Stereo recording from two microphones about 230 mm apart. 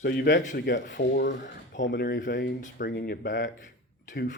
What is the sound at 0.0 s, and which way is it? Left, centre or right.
Speech, left.